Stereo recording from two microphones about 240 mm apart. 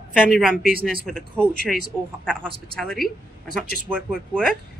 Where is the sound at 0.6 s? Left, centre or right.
Right.